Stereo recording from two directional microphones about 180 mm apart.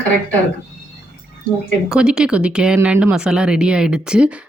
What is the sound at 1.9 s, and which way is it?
Speech, 5° right (ahead or behind).